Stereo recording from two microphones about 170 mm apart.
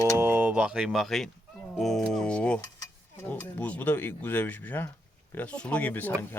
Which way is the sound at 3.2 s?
10° left (ahead or behind).